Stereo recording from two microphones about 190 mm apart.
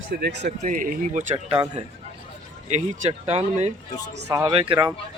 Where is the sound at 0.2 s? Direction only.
60° right (ahead or behind).